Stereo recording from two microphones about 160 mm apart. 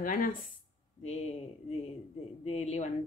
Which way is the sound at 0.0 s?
60° left (ahead or behind).